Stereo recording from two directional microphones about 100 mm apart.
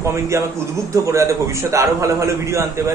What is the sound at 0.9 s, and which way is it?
A man's voice, 30° right (ahead or behind).